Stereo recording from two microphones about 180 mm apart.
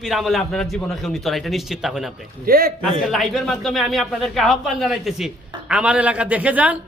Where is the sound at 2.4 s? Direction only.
55° right (ahead or behind).